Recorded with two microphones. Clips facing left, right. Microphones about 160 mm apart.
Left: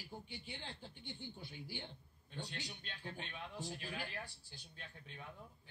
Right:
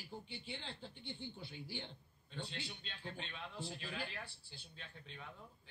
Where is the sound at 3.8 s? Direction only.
50° left (ahead or behind).